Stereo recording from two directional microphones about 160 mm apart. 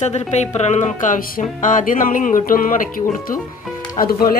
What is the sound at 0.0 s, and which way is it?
Speech, 45° left (ahead or behind).